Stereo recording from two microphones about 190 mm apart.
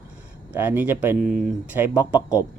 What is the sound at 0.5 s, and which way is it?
Speech, 10° right (ahead or behind).